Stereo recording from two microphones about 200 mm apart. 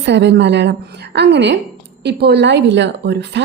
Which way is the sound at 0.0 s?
60° right (ahead or behind).